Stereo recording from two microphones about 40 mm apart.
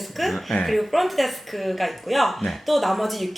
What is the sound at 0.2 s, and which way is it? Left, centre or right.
Speech, centre.